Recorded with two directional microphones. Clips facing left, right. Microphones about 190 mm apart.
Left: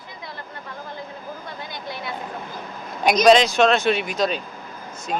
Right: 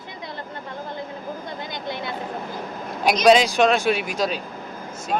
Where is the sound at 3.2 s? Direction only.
10° right (ahead or behind).